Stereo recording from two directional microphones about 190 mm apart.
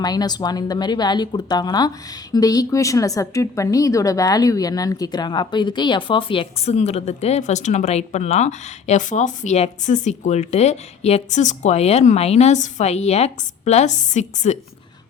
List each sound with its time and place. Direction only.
0.0 s a woman's voice: 20° left (ahead or behind); by 14.6 s 40° left (ahead or behind)